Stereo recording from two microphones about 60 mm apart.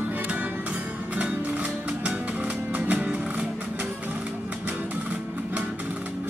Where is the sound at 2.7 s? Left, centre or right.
Right.